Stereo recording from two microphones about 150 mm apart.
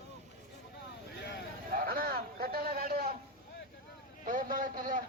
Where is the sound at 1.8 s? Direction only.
75° right (ahead or behind).